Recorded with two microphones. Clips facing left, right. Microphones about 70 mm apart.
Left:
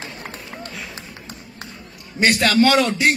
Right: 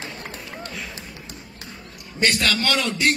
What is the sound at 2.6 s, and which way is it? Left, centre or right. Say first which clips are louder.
Speech: left 8 dB; left.